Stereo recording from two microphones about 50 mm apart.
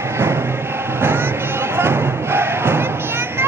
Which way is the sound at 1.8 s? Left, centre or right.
Right.